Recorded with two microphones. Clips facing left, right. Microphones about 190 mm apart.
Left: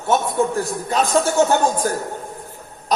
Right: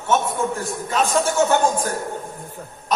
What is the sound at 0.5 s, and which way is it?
Speech, 35° left (ahead or behind).